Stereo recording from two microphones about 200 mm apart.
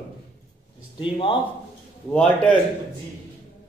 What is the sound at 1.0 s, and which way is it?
Speech, 25° left (ahead or behind).